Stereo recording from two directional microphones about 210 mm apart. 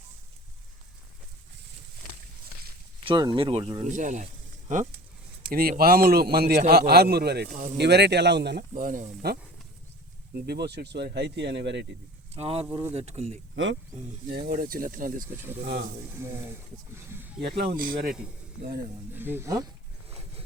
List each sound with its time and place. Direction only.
3.0 s speech: 25° right (ahead or behind)
3.9 s a man's voice: 35° right (ahead or behind); by 11.9 s 55° right (ahead or behind)
12.3 s speech: 30° right (ahead or behind)
14.3 s a man's voice: 45° right (ahead or behind)
16.9 s speech: 10° right (ahead or behind)
17.4 s a man's voice: 50° right (ahead or behind)
19.1 s speech: 10° right (ahead or behind)